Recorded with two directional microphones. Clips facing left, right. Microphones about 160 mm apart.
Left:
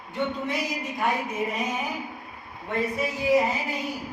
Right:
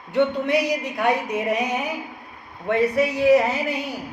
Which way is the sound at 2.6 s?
70° right (ahead or behind).